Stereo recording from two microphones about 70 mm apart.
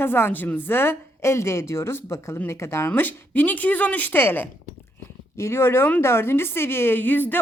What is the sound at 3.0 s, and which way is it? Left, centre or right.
Speech, left.